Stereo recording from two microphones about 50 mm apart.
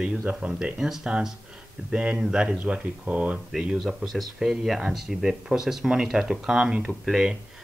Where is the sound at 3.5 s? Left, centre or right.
Centre.